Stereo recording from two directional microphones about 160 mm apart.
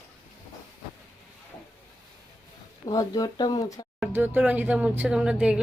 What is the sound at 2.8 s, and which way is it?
Speech, 25° left (ahead or behind).